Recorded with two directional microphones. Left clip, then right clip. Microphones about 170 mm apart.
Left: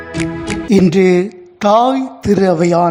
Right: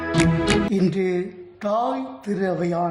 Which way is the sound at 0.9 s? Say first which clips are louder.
Left 12 dB; 40° left (ahead or behind).